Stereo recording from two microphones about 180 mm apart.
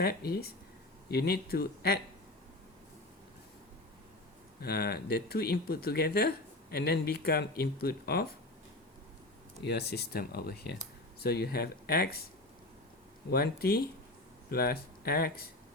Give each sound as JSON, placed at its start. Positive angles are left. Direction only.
{"t": 0.0, "sound": "speech", "side_deg": 60}
{"t": 4.6, "sound": "speech", "side_deg": 60}
{"t": 9.6, "sound": "speech", "side_deg": 65}
{"t": 13.3, "sound": "speech", "side_deg": 60}